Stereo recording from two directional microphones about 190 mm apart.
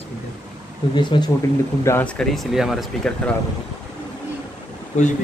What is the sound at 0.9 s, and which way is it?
Speech, 25° left (ahead or behind).